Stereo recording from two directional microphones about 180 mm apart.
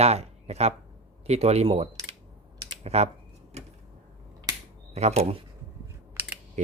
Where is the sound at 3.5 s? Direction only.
40° right (ahead or behind).